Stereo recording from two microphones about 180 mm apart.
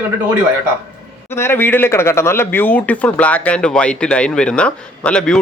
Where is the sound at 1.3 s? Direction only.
15° left (ahead or behind).